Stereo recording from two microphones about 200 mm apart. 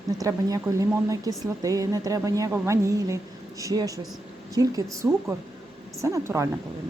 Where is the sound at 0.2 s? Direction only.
15° right (ahead or behind).